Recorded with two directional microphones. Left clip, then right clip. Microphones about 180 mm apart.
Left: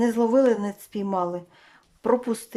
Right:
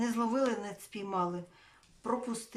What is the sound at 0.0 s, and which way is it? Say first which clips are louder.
Speech: left 12 dB; 35° left (ahead or behind).